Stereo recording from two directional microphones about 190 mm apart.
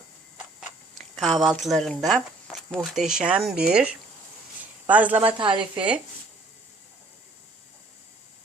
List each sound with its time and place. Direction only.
1.1 s speech: centre (ahead or behind)
4.9 s a man's voice: 10° right (ahead or behind)
5.4 s speech: 25° right (ahead or behind)